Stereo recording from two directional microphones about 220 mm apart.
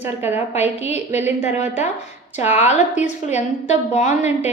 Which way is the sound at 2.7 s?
30° left (ahead or behind).